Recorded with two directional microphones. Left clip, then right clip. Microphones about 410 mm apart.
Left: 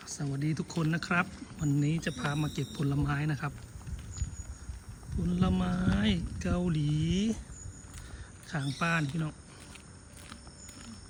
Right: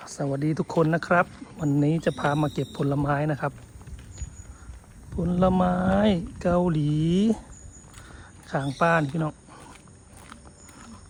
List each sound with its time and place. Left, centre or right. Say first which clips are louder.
0.0 s speech: right 9 dB; centre
5.2 s speech: right 11 dB; centre
8.4 s speech: right 10 dB; centre